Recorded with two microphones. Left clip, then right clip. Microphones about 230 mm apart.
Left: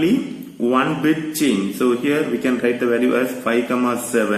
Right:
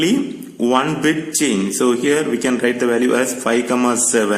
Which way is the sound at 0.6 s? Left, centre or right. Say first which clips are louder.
Right 1 dB; right.